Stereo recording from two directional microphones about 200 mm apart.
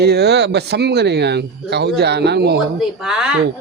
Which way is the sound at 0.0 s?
55° right (ahead or behind).